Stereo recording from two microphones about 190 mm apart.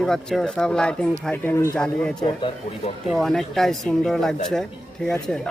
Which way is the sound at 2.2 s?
25° left (ahead or behind).